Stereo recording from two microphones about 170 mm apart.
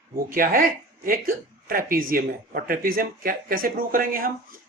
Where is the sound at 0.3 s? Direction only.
55° right (ahead or behind).